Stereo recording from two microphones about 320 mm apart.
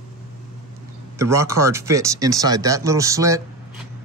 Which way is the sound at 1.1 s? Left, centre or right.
Centre.